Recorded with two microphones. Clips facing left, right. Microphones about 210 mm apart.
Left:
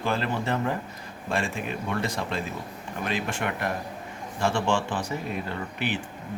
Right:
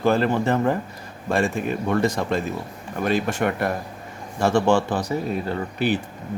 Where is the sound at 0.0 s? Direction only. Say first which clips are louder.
Right 8 dB; 45° right (ahead or behind).